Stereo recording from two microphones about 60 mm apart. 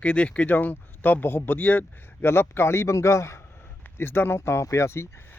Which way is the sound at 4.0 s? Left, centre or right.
Left.